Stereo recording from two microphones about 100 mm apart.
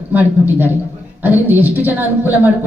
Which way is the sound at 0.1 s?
20° right (ahead or behind).